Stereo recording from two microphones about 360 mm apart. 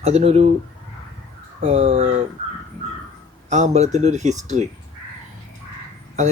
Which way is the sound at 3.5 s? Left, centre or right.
Centre.